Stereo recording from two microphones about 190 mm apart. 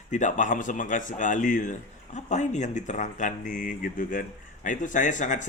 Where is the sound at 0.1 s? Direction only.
40° left (ahead or behind).